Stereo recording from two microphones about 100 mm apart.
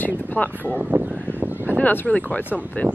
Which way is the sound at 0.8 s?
15° right (ahead or behind).